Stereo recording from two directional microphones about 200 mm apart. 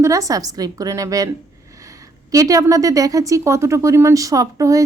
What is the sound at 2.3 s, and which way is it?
Speech, 15° right (ahead or behind).